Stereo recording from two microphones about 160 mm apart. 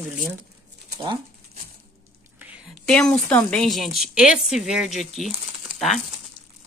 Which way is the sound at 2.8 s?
5° left (ahead or behind).